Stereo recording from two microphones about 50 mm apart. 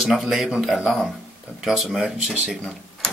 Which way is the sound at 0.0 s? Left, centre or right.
Centre.